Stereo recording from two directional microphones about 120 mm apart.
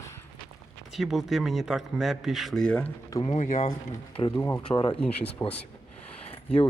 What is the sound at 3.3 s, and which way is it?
Speech, 85° left.